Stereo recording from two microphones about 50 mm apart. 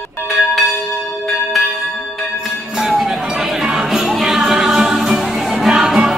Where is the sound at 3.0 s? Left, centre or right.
Centre.